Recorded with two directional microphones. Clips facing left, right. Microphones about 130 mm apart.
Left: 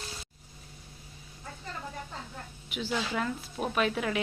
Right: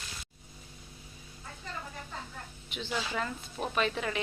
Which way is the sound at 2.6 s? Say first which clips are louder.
Left 3 dB; 5° left (ahead or behind).